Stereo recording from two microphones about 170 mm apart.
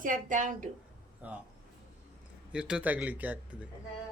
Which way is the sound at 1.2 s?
10° right (ahead or behind).